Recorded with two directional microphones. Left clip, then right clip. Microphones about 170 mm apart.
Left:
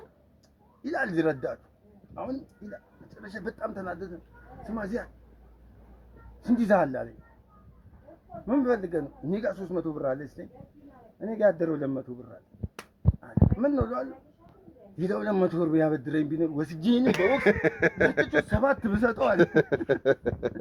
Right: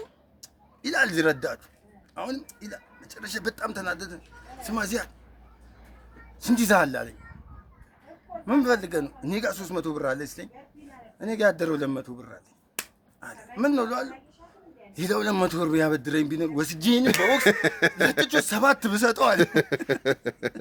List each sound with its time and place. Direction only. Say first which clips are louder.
0.8 s a man's voice: right 5 dB; 20° right (ahead or behind)
6.4 s a man's voice: right 2 dB; 25° right (ahead or behind)
8.4 s a man's voice: right 3 dB; 20° right (ahead or behind)
17.0 s a man's voice: right 3 dB; 40° right (ahead or behind)